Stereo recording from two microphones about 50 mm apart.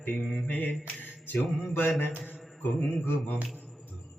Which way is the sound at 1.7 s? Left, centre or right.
Left.